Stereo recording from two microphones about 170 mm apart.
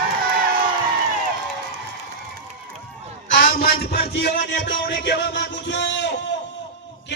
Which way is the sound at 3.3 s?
60° left (ahead or behind).